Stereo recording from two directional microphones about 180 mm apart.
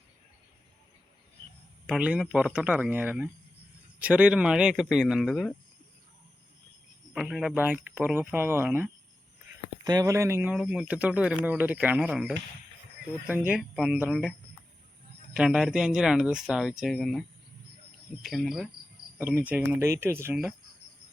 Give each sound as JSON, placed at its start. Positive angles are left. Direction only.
{"t": 1.9, "sound": "speech", "side_deg": -5}
{"t": 7.1, "sound": "speech", "side_deg": 0}
{"t": 15.4, "sound": "speech", "side_deg": -5}